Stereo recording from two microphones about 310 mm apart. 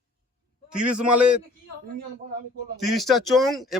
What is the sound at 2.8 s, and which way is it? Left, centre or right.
Speech, centre.